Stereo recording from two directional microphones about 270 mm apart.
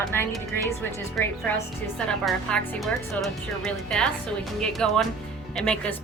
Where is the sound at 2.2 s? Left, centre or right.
Centre.